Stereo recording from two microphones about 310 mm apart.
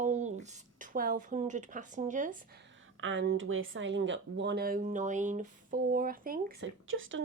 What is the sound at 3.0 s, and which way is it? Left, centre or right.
Speech, right.